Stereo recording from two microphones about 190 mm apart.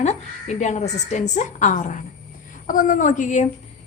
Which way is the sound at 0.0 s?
35° left (ahead or behind).